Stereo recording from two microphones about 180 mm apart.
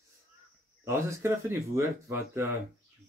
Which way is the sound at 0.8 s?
15° right (ahead or behind).